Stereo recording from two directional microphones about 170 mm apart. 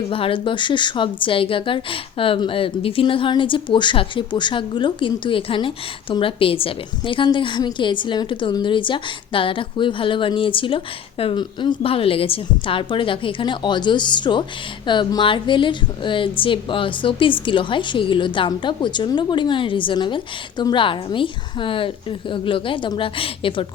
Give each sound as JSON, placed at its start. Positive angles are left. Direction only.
{"t": 0.1, "sound": "a woman's voice", "side_deg": 30}